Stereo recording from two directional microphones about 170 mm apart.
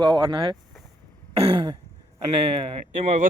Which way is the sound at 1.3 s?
35° right (ahead or behind).